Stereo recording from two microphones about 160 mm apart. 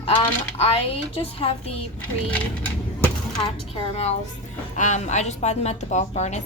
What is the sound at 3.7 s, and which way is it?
A woman's voice, 40° left (ahead or behind).